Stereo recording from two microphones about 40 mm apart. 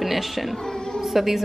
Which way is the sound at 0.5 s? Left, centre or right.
Centre.